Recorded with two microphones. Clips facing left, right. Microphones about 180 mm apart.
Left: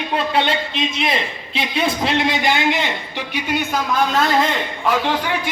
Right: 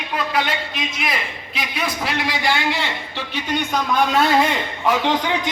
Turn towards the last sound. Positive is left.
turn(degrees=-20)  # may be behind; listen again after turning